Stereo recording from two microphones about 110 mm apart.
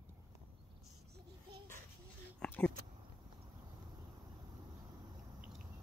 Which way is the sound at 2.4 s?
15° left (ahead or behind).